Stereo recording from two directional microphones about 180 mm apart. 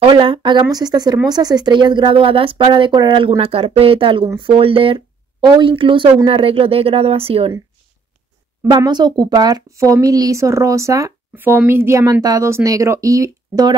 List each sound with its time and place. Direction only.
0.0 s speech: 30° right (ahead or behind)
8.6 s speech: 25° right (ahead or behind)